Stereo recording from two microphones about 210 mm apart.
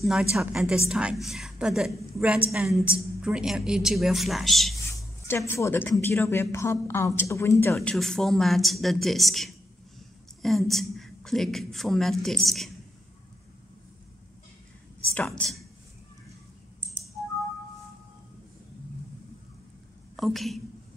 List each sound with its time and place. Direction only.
0.0 s a woman's voice: centre (ahead or behind)
5.5 s speech: 10° left (ahead or behind)
7.9 s a woman's voice: centre (ahead or behind)
15.1 s speech: 5° left (ahead or behind)
20.2 s a woman's voice: centre (ahead or behind)